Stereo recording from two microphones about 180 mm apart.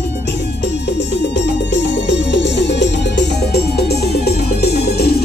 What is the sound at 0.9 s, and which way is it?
Music, 75° left (ahead or behind).